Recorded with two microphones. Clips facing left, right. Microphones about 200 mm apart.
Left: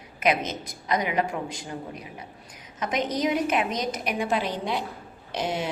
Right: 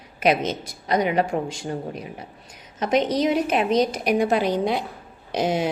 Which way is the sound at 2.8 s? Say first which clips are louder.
Right 6 dB; 30° right (ahead or behind).